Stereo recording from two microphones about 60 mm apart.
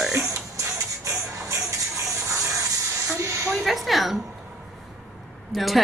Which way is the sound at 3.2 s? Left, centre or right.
Right.